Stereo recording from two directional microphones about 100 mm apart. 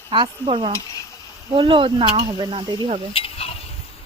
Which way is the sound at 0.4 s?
65° right (ahead or behind).